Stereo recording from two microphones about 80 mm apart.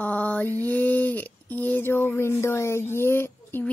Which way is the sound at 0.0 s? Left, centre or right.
Centre.